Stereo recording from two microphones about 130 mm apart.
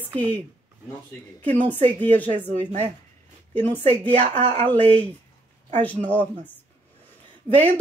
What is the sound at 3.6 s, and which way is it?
Speech, 15° left (ahead or behind).